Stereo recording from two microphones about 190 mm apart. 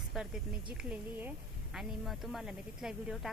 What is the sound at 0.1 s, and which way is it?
Snake, centre (ahead or behind).